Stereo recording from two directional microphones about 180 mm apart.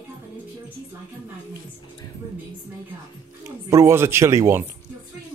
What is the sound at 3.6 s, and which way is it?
Speech, 15° right (ahead or behind).